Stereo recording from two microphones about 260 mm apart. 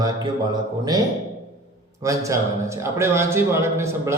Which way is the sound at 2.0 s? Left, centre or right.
Centre.